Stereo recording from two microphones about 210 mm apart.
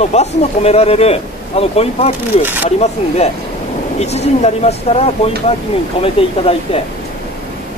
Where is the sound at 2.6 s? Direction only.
30° left (ahead or behind).